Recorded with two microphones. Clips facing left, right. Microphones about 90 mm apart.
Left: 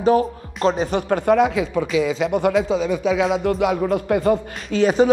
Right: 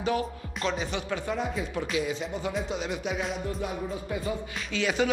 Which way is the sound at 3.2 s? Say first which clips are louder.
Left 13 dB; 90° left.